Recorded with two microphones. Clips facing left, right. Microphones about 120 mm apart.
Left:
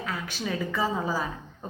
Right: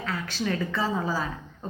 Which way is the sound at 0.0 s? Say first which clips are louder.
Right 2 dB; 15° left (ahead or behind).